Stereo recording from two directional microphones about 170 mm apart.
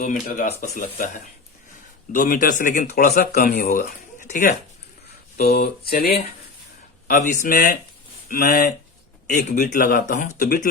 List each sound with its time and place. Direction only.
0.0 s a man's voice: 45° left (ahead or behind)
3.4 s speech: 70° left (ahead or behind)
3.8 s speech: 50° left (ahead or behind)
5.5 s speech: 65° left (ahead or behind)
7.1 s a man's voice: 45° left (ahead or behind); by 10.7 s 65° left (ahead or behind)